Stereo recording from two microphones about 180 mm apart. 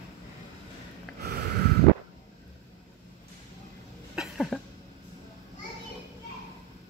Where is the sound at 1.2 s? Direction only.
65° right (ahead or behind).